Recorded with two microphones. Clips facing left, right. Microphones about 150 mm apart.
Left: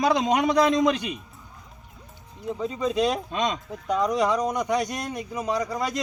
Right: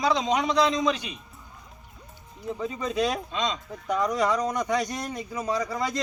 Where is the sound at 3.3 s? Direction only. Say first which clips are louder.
Left 3 dB; 55° left (ahead or behind).